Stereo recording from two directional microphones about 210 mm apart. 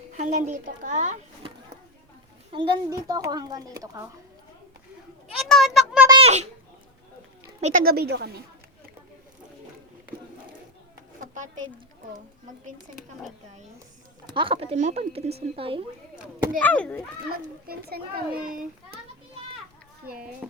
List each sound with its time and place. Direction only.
0.2 s a child's voice: 35° right (ahead or behind); by 4.0 s 20° right (ahead or behind)
5.4 s a sound: centre (ahead or behind)
6.1 s a sound: 30° right (ahead or behind)
7.6 s a child's voice: 45° right (ahead or behind)
11.2 s a sound: 35° right (ahead or behind)
14.3 s a woman's voice: 25° right (ahead or behind)
16.6 s speech: 5° left (ahead or behind)
17.3 s a child's voice: 45° right (ahead or behind)
20.4 s music: 5° right (ahead or behind)